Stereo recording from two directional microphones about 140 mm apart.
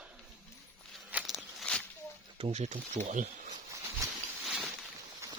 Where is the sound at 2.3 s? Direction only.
50° right (ahead or behind).